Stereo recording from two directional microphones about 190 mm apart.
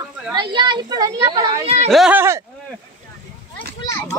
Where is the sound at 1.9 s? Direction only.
5° right (ahead or behind).